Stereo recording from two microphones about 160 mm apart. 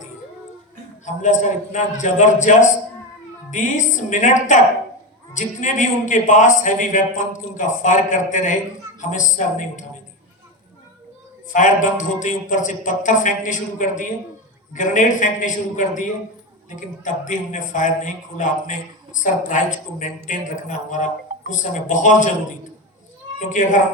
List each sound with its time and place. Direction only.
1.0 s a man's voice: 50° left (ahead or behind)
11.5 s a man's voice: 55° left (ahead or behind)
23.4 s a man's voice: 50° left (ahead or behind)